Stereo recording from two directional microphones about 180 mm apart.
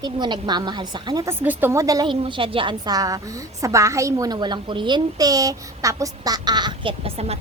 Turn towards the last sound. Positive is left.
turn(degrees=-35)  # may be behind; listen again after turning